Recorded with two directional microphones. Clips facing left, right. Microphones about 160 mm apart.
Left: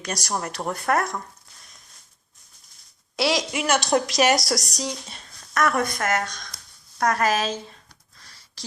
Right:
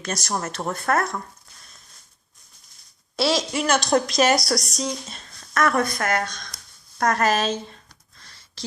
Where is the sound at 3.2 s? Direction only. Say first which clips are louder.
Right 1 dB; 15° left (ahead or behind).